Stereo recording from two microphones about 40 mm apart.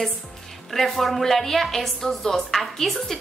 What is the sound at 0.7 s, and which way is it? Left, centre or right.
A woman's voice, centre.